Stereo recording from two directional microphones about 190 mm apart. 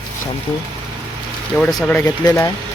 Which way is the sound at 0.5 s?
15° left (ahead or behind).